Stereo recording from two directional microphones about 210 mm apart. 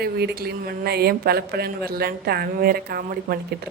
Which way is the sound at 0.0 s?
50° right (ahead or behind).